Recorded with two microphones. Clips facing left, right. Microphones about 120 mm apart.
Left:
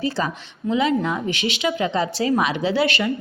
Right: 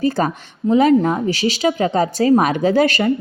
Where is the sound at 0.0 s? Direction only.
45° right (ahead or behind).